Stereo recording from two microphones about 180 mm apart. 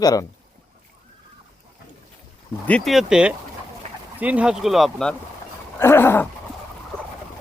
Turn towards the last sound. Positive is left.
turn(degrees=10)  # may be behind; listen again after turning